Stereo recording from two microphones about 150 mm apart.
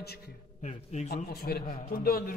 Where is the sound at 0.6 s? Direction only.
50° left (ahead or behind).